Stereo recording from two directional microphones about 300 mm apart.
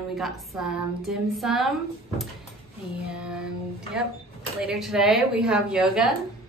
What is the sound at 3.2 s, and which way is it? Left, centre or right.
Speech, centre.